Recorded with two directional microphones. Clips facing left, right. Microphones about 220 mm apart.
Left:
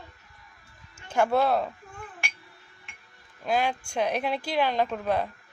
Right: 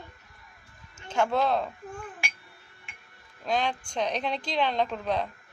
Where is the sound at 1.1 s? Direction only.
10° left (ahead or behind).